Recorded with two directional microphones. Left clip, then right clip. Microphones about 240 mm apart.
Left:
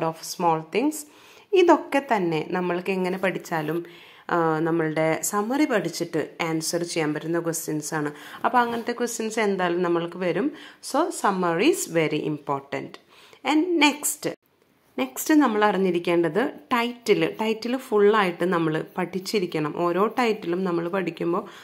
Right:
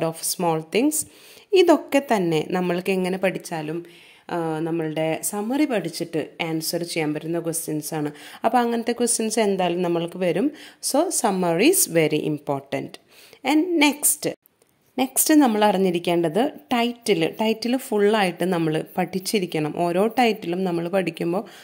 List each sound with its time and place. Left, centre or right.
0.0 s a woman's voice: right
3.4 s a woman's voice: right